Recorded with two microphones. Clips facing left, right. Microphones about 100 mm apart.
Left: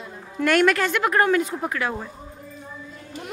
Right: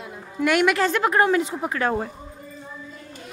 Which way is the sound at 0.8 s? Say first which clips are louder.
Right 1 dB; 25° right (ahead or behind).